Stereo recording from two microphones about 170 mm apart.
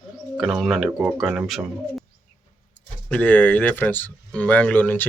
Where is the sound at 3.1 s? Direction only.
10° left (ahead or behind).